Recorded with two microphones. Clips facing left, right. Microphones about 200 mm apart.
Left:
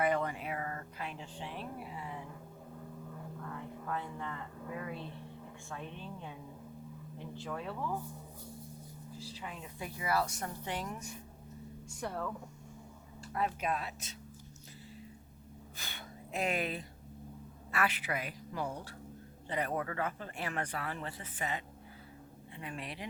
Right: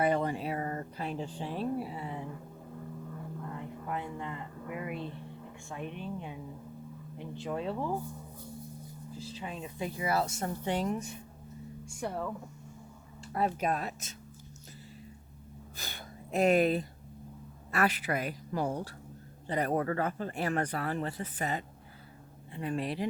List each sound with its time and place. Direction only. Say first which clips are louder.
0.0 s a sound: right 3 dB; 30° right (ahead or behind)
3.8 s a woman's voice: right 2 dB; 15° right (ahead or behind)
9.1 s speech: right 5 dB; 20° right (ahead or behind)
11.9 s a woman's voice: right 3 dB; 10° right (ahead or behind)
13.2 s speech: right 4 dB; 35° right (ahead or behind)
15.8 s a sound: right 3 dB; 40° right (ahead or behind)
17.7 s speech: right 5 dB; 40° right (ahead or behind)